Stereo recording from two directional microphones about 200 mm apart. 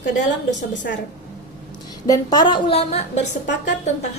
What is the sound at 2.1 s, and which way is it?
Speech, 20° left (ahead or behind).